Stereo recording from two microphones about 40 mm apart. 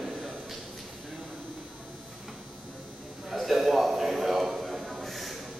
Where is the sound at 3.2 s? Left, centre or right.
Centre.